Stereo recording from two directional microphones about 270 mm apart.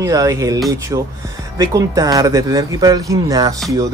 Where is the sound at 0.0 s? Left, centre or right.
Centre.